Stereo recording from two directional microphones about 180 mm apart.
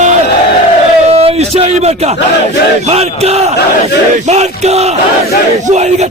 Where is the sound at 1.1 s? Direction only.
35° right (ahead or behind).